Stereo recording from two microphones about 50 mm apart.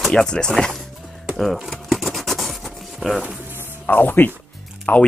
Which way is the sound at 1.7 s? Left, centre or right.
Centre.